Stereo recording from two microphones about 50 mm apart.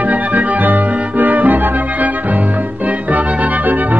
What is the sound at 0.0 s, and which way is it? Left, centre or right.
Music, right.